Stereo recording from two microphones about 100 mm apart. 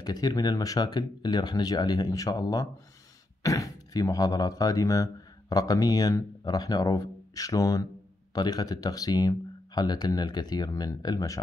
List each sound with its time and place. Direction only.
0.0 s speech: 40° left (ahead or behind)